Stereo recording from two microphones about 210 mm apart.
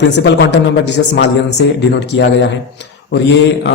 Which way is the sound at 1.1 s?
55° left (ahead or behind).